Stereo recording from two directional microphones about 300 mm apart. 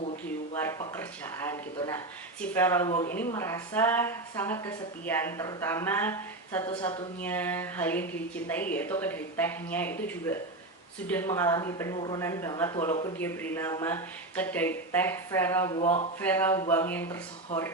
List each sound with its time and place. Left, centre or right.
0.6 s a woman's voice: centre
13.1 s a woman's voice: centre
15.8 s speech: left
16.2 s a woman's voice: centre